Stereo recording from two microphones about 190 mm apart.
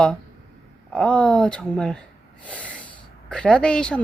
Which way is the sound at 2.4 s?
5° left (ahead or behind).